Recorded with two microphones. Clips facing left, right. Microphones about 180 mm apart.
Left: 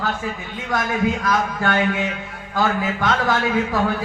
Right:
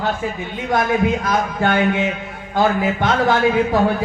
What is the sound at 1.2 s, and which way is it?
Speech, 25° right (ahead or behind).